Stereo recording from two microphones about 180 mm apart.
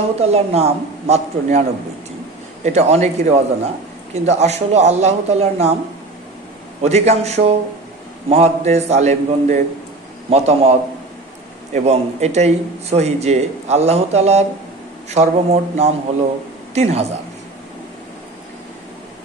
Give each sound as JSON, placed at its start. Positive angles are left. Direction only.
{"t": 0.2, "sound": "a man's voice", "side_deg": -35}
{"t": 6.8, "sound": "a man's voice", "side_deg": -35}
{"t": 11.7, "sound": "a man's voice", "side_deg": -35}